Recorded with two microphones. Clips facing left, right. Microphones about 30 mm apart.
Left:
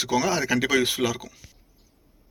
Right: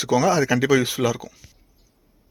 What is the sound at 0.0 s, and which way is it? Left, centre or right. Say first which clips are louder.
Speech: right 5 dB; left.